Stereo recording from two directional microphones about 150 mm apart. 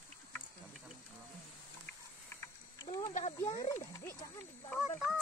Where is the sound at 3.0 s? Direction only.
55° left (ahead or behind).